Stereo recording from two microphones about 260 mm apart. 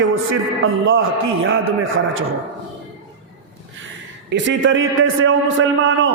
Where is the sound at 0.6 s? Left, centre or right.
Right.